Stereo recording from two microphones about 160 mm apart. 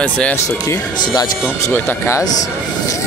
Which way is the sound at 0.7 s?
25° left (ahead or behind).